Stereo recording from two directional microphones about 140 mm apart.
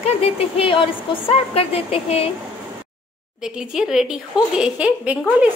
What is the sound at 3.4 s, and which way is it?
A woman's voice, 5° right (ahead or behind).